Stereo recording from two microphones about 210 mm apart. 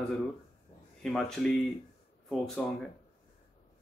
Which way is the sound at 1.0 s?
5° left (ahead or behind).